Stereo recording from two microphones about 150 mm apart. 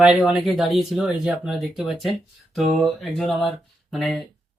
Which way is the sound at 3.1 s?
Centre (ahead or behind).